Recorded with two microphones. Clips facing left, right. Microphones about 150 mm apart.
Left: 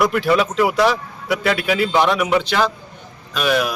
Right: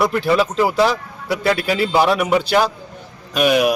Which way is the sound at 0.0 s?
30° right (ahead or behind).